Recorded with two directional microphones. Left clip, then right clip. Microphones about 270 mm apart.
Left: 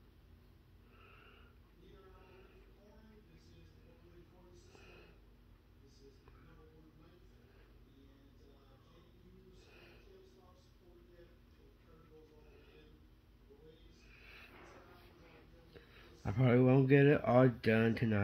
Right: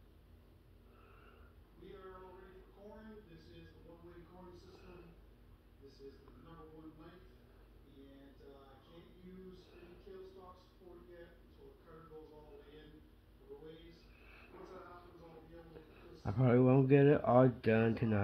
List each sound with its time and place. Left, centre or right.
16.3 s speech: left